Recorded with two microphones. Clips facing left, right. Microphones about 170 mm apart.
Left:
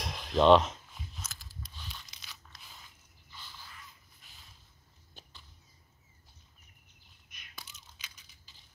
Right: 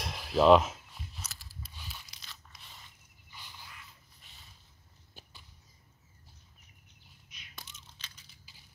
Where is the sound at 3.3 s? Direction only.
15° right (ahead or behind).